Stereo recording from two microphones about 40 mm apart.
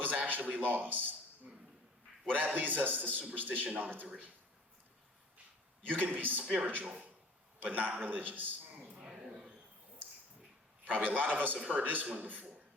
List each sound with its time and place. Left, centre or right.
0.0 s a man's voice: right
2.3 s a man's voice: right
5.9 s a man's voice: right
6.4 s a man's voice: right
7.6 s a man's voice: right
9.0 s a sound: centre
10.8 s a man's voice: right